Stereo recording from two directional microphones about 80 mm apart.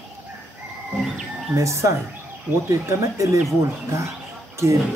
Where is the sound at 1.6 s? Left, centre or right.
Right.